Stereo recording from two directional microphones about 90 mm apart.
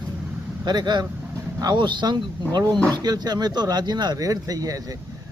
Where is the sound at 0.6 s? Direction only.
55° right (ahead or behind).